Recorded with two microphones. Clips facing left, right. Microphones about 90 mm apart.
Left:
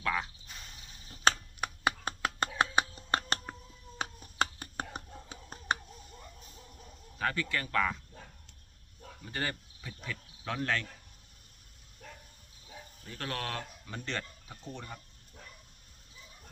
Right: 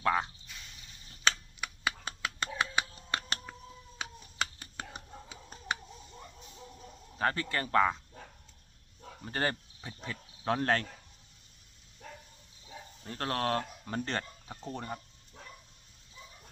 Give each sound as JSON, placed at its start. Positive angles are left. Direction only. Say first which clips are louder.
{"t": 0.0, "sound": "speech", "louder": "right 4 dB", "side_deg": -30}
{"t": 0.4, "sound": "a sound", "louder": "left 1 dB", "side_deg": 45}
{"t": 7.2, "sound": "speech", "louder": "right 2 dB", "side_deg": -35}
{"t": 9.2, "sound": "speech", "louder": "right 4 dB", "side_deg": -40}
{"t": 13.1, "sound": "speech", "louder": "right 6 dB", "side_deg": -40}